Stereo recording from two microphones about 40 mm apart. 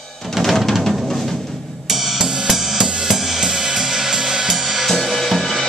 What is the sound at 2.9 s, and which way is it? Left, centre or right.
Cymbal, centre.